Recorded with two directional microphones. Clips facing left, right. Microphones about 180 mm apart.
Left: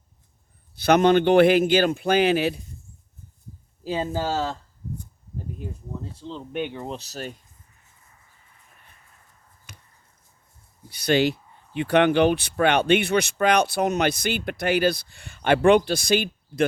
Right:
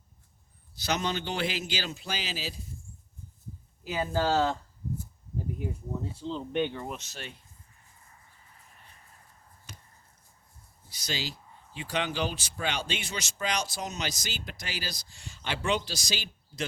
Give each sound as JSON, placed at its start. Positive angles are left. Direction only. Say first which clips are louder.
{"t": 0.8, "sound": "speech", "louder": "left 14 dB", "side_deg": 60}
{"t": 3.8, "sound": "speech", "louder": "left 5 dB", "side_deg": 30}
{"t": 4.1, "sound": "speech", "louder": "right 5 dB", "side_deg": 10}
{"t": 5.5, "sound": "speech", "louder": "right 1 dB", "side_deg": -10}
{"t": 6.2, "sound": "speech", "louder": "even", "side_deg": 5}
{"t": 6.7, "sound": "speech", "louder": "left 5 dB", "side_deg": 30}
{"t": 10.8, "sound": "speech", "louder": "left 16 dB", "side_deg": 60}